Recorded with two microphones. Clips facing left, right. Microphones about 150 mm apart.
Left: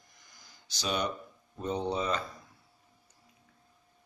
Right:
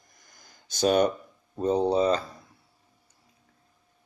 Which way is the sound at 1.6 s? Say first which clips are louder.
Right 9 dB; 35° right (ahead or behind).